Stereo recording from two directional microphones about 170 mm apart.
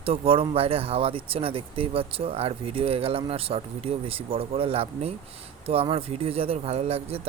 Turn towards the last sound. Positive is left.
turn(degrees=-35)  # may be behind; listen again after turning